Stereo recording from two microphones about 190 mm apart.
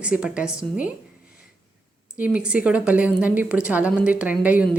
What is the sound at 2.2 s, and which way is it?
A woman's voice, 5° right (ahead or behind).